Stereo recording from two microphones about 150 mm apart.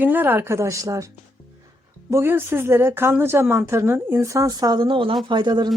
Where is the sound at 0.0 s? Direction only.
15° right (ahead or behind).